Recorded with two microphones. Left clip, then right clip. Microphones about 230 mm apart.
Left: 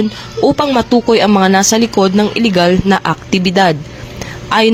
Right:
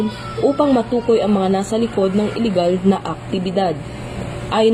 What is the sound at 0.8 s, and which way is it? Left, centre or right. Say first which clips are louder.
Speech: left 6 dB; left.